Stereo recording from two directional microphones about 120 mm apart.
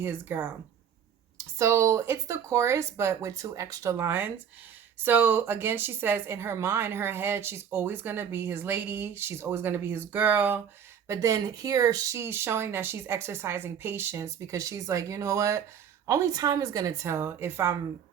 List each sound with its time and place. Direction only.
0.0 s a woman's voice: 20° right (ahead or behind)
1.5 s a woman's voice: 25° right (ahead or behind)
11.1 s a woman's voice: 30° right (ahead or behind)